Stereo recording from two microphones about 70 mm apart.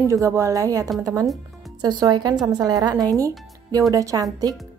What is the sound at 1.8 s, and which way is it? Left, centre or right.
Speech, right.